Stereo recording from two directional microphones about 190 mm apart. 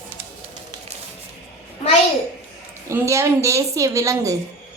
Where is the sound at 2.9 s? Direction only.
15° right (ahead or behind).